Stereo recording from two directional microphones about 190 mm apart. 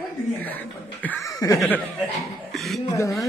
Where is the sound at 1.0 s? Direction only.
15° left (ahead or behind).